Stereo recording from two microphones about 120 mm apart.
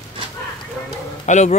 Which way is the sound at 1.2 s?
75° left (ahead or behind).